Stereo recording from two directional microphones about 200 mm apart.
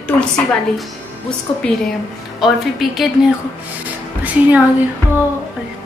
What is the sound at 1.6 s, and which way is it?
A woman's voice, 5° left (ahead or behind).